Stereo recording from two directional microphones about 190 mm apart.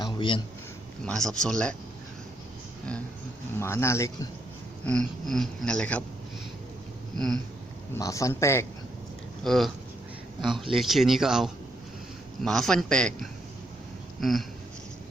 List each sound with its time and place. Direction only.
0.0 s a sound: 25° left (ahead or behind)
1.0 s a man's voice: 5° left (ahead or behind)
3.6 s speech: 15° left (ahead or behind)
4.9 s a man's voice: 5° left (ahead or behind)
7.9 s speech: 15° left (ahead or behind)
9.4 s a man's voice: centre (ahead or behind)
14.2 s a sound: centre (ahead or behind)